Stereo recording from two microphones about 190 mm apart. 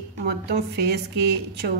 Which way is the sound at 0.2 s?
60° right (ahead or behind).